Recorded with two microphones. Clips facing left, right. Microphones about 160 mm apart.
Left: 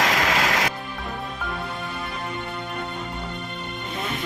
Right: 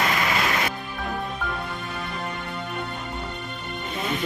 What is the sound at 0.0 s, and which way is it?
Music, 90° left.